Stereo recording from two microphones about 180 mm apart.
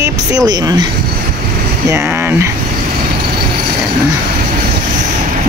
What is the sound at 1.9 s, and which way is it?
Speech, 15° right (ahead or behind).